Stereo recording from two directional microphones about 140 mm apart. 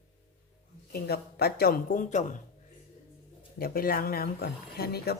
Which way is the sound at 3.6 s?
90° left.